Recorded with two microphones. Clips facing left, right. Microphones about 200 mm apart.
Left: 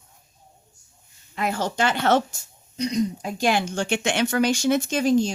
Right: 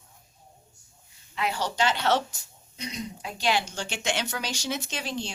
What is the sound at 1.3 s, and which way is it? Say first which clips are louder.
Speech: left 4 dB; 50° left (ahead or behind).